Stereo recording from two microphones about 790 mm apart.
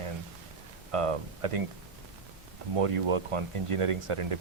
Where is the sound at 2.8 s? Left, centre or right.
Right.